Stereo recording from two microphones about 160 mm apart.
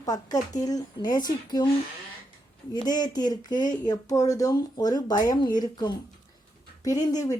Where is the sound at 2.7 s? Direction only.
25° left (ahead or behind).